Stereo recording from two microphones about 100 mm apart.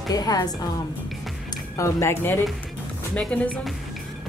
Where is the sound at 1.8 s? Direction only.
25° left (ahead or behind).